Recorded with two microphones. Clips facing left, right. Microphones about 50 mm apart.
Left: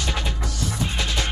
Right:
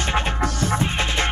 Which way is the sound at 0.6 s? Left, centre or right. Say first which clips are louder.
Right 2 dB; right.